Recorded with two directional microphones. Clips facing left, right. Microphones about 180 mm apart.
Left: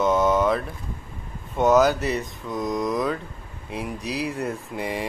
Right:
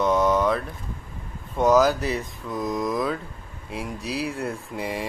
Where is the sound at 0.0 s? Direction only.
Centre (ahead or behind).